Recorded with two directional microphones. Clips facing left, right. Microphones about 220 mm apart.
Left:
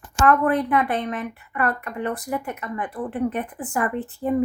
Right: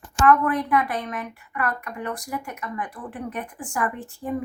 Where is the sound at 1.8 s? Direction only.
20° left (ahead or behind).